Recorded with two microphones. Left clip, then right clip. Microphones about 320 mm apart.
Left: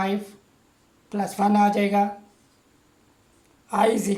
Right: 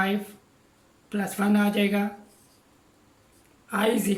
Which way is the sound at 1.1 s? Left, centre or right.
Centre.